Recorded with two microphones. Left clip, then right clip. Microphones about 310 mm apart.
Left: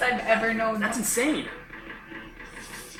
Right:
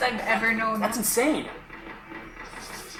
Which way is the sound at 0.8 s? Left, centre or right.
Centre.